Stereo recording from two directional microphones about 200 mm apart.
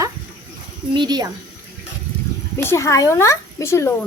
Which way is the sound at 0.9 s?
20° right (ahead or behind).